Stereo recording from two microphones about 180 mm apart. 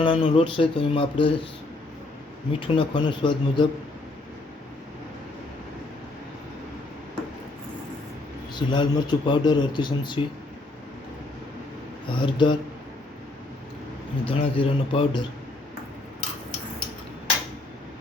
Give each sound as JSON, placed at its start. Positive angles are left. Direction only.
{"t": 0.0, "sound": "a man's voice", "side_deg": 30}
{"t": 2.5, "sound": "a man's voice", "side_deg": 30}
{"t": 8.5, "sound": "a man's voice", "side_deg": 25}
{"t": 12.1, "sound": "a man's voice", "side_deg": 25}
{"t": 14.3, "sound": "a man's voice", "side_deg": 30}